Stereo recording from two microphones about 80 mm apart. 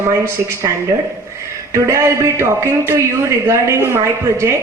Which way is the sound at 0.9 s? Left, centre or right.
Right.